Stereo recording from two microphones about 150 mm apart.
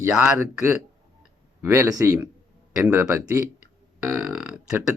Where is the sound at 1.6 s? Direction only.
20° right (ahead or behind).